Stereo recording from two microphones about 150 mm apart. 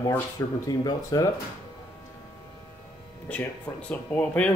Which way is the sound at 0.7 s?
25° left (ahead or behind).